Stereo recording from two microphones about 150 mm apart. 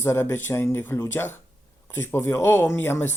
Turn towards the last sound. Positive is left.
turn(degrees=15)  # may be behind; listen again after turning